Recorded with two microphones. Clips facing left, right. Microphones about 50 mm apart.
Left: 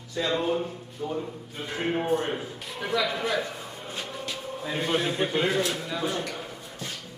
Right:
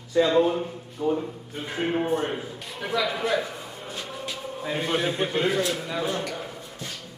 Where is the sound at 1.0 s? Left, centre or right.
Right.